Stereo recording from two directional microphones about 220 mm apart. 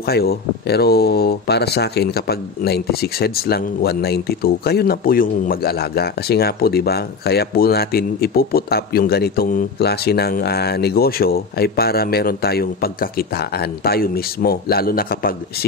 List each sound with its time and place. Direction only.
0.0 s speech: 45° left (ahead or behind)